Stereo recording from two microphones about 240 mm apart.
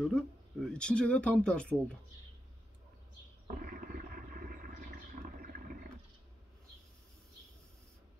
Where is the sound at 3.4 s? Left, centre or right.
Right.